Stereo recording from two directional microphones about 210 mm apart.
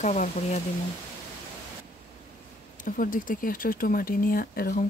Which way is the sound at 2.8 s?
40° left (ahead or behind).